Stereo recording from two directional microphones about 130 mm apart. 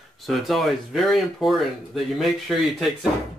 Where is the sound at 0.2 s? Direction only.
Centre (ahead or behind).